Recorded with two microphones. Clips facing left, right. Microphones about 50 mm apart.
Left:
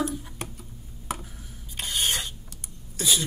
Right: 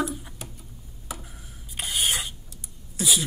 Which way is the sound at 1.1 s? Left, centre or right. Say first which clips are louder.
Left 5 dB; left.